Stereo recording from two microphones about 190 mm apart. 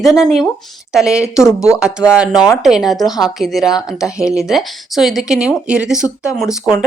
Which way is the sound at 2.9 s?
20° left (ahead or behind).